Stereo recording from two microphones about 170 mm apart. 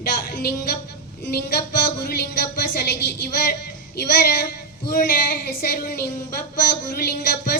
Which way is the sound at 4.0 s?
65° left (ahead or behind).